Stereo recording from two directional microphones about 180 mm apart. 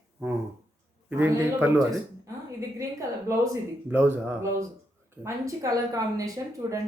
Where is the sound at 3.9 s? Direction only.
10° right (ahead or behind).